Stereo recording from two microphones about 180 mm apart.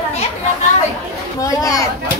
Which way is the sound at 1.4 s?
20° left (ahead or behind).